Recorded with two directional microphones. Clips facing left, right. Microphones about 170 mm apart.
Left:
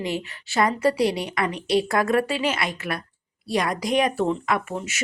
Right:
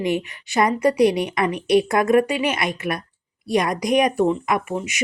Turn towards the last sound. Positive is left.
turn(degrees=-15)  # may be behind; listen again after turning